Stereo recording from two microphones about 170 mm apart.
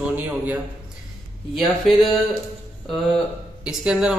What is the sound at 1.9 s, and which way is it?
Speech, centre (ahead or behind).